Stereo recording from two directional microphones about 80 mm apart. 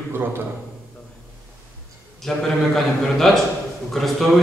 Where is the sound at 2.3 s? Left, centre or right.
Centre.